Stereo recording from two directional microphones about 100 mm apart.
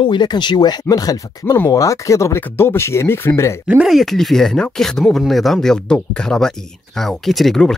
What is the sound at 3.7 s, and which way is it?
Speech, 5° right (ahead or behind).